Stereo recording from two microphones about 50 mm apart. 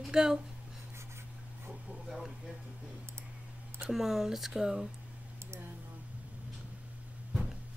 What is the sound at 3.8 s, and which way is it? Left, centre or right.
Speech, centre.